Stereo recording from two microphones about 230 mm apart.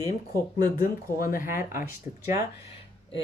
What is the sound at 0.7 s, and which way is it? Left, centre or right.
Speech, left.